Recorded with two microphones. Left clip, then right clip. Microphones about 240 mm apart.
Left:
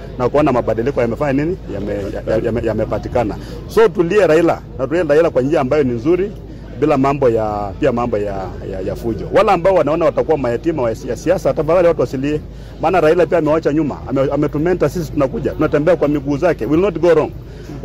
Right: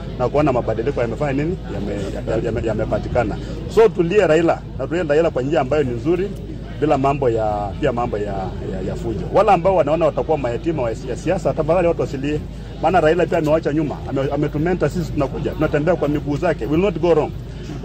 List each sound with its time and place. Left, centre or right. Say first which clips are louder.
0.2 s a man's voice: left 3 dB; left
9.4 s a man's voice: left 2 dB; left